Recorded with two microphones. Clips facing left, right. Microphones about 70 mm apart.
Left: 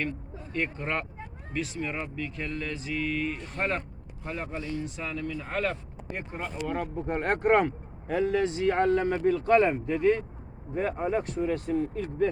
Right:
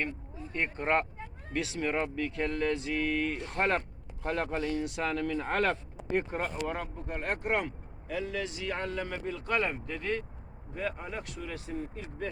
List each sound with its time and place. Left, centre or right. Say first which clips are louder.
0.5 s speech: right 2 dB; right
1.5 s speech: right 1 dB; right
3.4 s speech: right 1 dB; right
6.1 s speech: right 5 dB; right
7.1 s speech: left 8 dB; left
9.6 s speech: left 8 dB; left
9.9 s speech: left 10 dB; centre; by 12.3 s left